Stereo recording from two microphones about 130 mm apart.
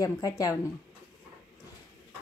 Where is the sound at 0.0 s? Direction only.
25° left (ahead or behind).